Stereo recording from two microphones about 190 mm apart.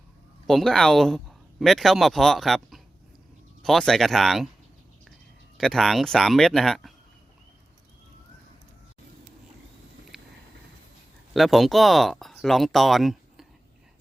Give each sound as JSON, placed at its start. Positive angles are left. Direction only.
{"t": 0.4, "sound": "speech", "side_deg": 0}
{"t": 5.5, "sound": "speech", "side_deg": 0}
{"t": 10.1, "sound": "a sound", "side_deg": 0}
{"t": 11.3, "sound": "speech", "side_deg": 0}